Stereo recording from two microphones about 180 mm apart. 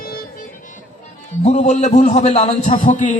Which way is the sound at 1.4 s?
40° left (ahead or behind).